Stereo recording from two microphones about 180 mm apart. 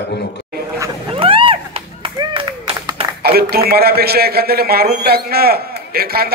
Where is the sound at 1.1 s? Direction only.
30° right (ahead or behind).